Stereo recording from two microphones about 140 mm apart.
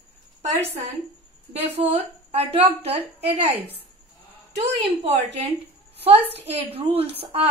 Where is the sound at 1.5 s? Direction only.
45° right (ahead or behind).